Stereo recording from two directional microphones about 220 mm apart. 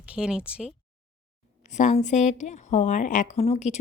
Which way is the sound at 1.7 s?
35° left (ahead or behind).